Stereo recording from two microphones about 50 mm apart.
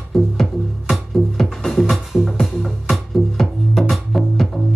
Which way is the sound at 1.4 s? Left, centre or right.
Centre.